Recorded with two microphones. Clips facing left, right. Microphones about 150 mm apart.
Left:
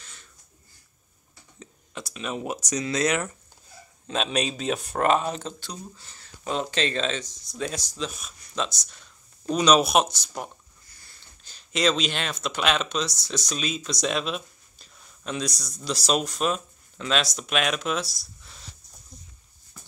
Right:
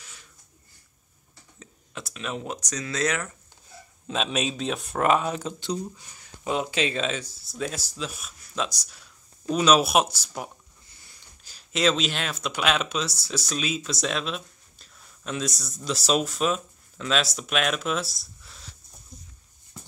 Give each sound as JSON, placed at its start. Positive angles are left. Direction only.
{"t": 0.0, "sound": "a sound", "side_deg": -10}
{"t": 1.6, "sound": "speech", "side_deg": 0}
{"t": 4.1, "sound": "speech", "side_deg": 0}
{"t": 10.9, "sound": "sniff", "side_deg": -20}
{"t": 11.4, "sound": "speech", "side_deg": -5}